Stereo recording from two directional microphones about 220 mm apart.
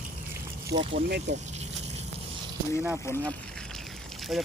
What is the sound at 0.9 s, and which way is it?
Speech, 50° right (ahead or behind).